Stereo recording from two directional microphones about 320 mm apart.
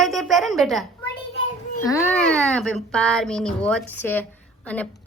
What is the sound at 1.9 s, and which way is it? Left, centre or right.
A woman's voice, centre.